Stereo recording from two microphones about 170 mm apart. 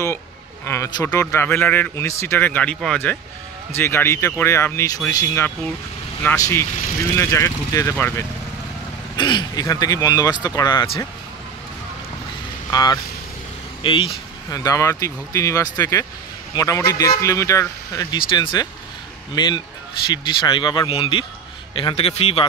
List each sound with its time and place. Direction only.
0.7 s a man's voice: 20° left (ahead or behind)
9.1 s speech: 25° left (ahead or behind)
12.7 s a man's voice: 20° left (ahead or behind)